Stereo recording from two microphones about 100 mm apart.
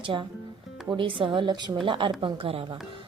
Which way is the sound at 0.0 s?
55° right (ahead or behind).